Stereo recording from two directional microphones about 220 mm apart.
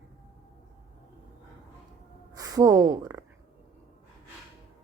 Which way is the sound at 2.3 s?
15° right (ahead or behind).